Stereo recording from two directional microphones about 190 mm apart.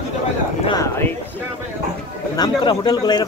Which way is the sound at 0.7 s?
15° left (ahead or behind).